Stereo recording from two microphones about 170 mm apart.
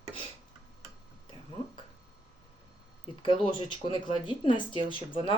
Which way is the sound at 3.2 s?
30° left (ahead or behind).